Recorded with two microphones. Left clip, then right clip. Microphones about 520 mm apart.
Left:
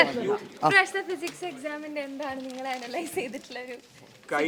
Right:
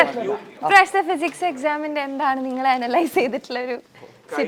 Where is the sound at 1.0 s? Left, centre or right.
Right.